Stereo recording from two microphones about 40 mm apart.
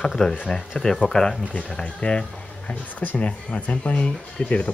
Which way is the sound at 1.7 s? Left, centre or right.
Left.